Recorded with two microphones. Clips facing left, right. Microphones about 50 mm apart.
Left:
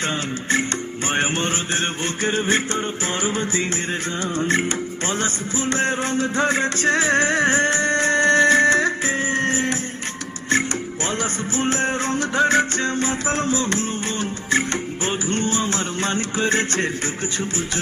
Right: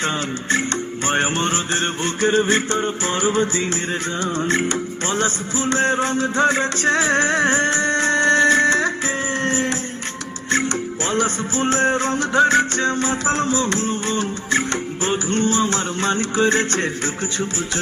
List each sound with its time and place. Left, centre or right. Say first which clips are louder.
1.0 s music: right 2 dB; centre
1.4 s music: right 2 dB; centre
11.5 s music: right 3 dB; centre